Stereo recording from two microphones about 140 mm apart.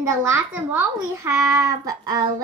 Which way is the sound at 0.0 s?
20° right (ahead or behind).